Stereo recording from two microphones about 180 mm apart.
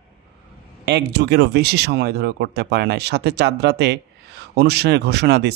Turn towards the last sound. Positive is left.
turn(degrees=-70)  # may be behind; listen again after turning